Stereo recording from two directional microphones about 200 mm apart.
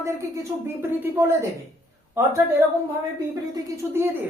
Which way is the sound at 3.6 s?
10° right (ahead or behind).